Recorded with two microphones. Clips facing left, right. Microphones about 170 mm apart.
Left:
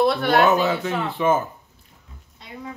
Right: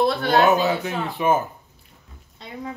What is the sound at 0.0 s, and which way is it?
Speech, 35° right (ahead or behind).